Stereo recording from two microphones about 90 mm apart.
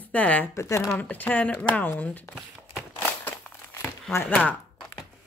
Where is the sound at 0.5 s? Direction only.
30° left (ahead or behind).